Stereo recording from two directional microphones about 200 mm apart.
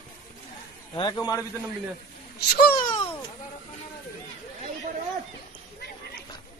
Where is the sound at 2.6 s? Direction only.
50° left (ahead or behind).